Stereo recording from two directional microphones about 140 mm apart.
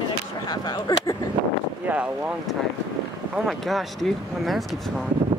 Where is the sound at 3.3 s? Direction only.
Centre (ahead or behind).